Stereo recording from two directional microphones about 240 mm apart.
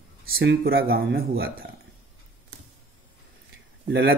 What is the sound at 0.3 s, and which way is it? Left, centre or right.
Speech, right.